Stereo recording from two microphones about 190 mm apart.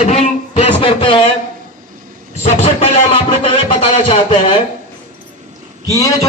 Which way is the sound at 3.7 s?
30° left (ahead or behind).